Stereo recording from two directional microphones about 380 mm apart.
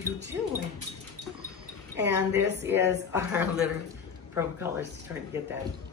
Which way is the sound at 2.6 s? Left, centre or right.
Centre.